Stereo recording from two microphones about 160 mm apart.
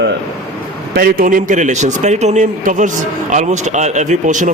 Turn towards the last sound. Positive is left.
turn(degrees=-50)  # may be behind; listen again after turning